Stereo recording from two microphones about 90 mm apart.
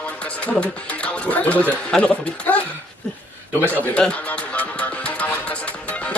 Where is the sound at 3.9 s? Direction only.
10° left (ahead or behind).